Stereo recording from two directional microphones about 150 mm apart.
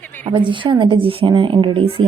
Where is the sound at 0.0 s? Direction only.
10° left (ahead or behind).